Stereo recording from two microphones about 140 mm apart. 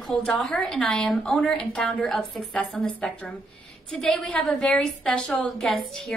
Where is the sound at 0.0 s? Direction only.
Centre (ahead or behind).